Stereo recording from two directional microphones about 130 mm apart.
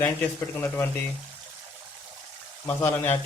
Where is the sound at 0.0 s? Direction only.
20° left (ahead or behind).